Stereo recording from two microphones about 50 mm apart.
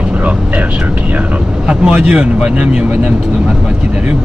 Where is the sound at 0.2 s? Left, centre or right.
Right.